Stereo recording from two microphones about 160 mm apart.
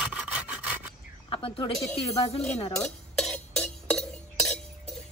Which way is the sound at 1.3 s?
35° left (ahead or behind).